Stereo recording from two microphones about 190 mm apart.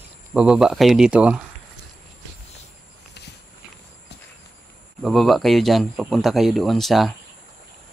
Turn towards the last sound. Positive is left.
turn(degrees=0)  # may be behind; listen again after turning